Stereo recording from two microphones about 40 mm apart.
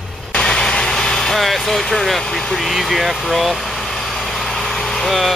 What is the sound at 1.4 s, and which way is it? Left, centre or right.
Speech, centre.